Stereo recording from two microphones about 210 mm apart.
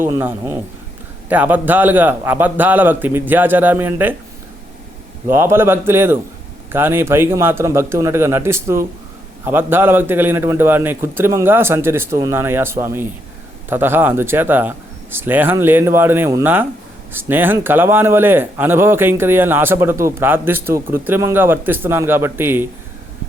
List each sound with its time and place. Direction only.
0.0 s a man's voice: 10° right (ahead or behind)
5.3 s a man's voice: 10° right (ahead or behind)